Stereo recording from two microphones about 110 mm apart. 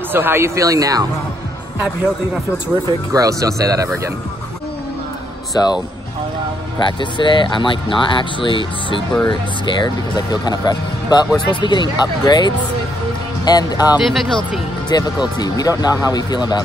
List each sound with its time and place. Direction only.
0.1 s speech: 20° right (ahead or behind)
3.1 s speech: 30° right (ahead or behind)
5.5 s speech: 40° left (ahead or behind)
6.8 s speech: 45° left (ahead or behind)
13.9 s speech: centre (ahead or behind)
14.9 s speech: 40° left (ahead or behind)